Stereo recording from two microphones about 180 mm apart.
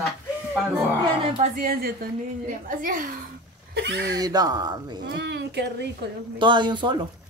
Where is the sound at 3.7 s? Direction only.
65° right (ahead or behind).